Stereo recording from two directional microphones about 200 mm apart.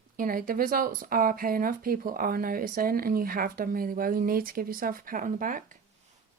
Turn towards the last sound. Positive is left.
turn(degrees=-40)  # may be behind; listen again after turning